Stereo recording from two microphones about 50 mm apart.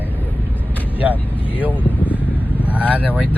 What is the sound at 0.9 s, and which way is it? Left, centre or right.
Vehicle, right.